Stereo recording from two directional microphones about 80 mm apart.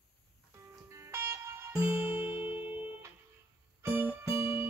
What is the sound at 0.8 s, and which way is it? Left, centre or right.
Music, right.